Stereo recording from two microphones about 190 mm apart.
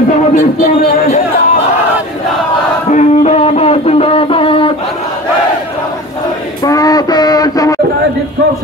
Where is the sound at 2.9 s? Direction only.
35° left (ahead or behind).